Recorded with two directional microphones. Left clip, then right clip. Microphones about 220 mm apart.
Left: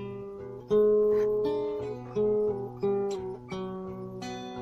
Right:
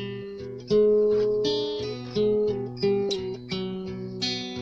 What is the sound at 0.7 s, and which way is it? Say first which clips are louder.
Music: right 3 dB; 40° right (ahead or behind).